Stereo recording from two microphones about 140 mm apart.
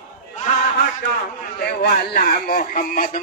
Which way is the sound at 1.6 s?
90° left.